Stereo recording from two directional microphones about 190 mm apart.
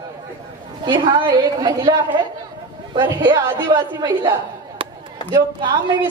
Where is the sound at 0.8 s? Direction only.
25° right (ahead or behind).